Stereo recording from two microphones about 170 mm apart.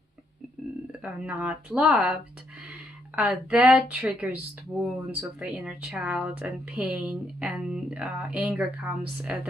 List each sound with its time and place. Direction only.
1.0 s speech: 5° right (ahead or behind)
3.2 s speech: 5° right (ahead or behind)